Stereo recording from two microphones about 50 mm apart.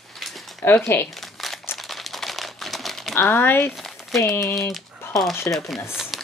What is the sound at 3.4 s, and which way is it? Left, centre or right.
Speech, left.